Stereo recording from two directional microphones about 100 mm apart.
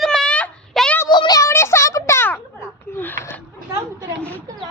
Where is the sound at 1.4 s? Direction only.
25° left (ahead or behind).